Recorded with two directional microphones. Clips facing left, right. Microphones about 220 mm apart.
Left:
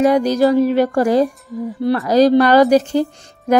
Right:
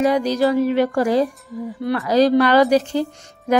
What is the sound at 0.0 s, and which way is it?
A woman's voice, 45° left (ahead or behind).